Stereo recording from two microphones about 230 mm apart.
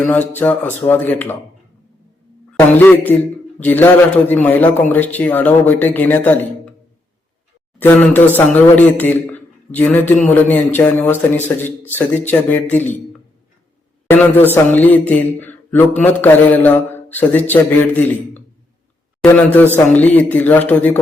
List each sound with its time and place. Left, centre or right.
0.0 s a man's voice: centre
2.5 s a man's voice: centre
7.8 s a man's voice: centre
14.1 s a man's voice: centre